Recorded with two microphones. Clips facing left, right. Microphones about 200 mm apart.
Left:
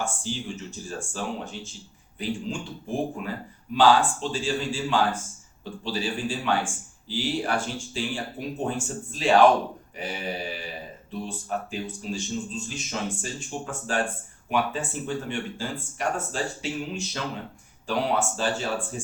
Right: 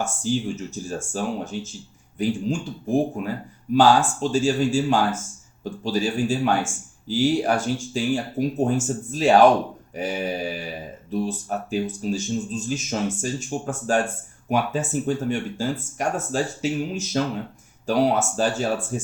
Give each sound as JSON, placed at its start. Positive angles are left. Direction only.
{"t": 0.0, "sound": "speech", "side_deg": -45}